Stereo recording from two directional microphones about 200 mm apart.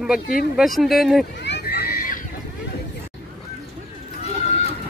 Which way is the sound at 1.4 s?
55° left (ahead or behind).